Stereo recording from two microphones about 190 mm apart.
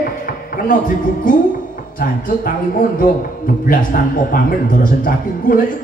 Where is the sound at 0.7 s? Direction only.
45° left (ahead or behind).